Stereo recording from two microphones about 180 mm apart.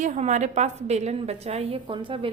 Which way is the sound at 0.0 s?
40° right (ahead or behind).